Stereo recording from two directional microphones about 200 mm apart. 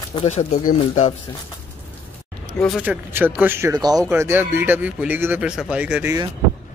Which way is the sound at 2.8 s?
10° right (ahead or behind).